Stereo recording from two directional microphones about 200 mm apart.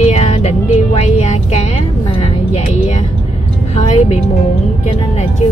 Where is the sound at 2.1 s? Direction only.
30° left (ahead or behind).